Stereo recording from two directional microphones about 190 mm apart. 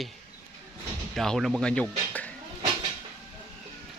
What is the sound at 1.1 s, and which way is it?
Speech, centre (ahead or behind).